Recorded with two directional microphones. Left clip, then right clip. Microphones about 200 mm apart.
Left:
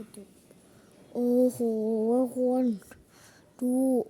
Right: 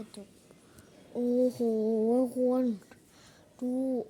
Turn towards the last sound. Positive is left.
turn(degrees=35)  # may be behind; listen again after turning